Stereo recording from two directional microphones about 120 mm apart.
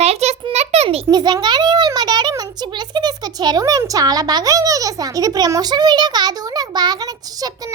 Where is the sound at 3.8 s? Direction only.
30° right (ahead or behind).